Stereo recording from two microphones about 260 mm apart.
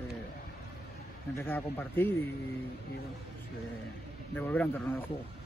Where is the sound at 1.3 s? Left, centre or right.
Centre.